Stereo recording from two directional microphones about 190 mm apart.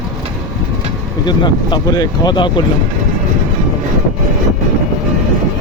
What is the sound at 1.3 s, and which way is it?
Speech, 25° left (ahead or behind).